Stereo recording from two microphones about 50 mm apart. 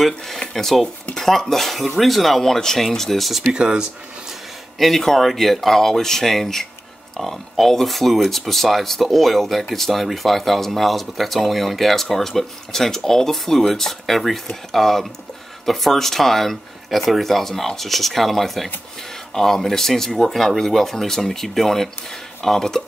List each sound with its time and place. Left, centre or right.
0.4 s speech: centre
3.5 s speech: centre
4.7 s speech: centre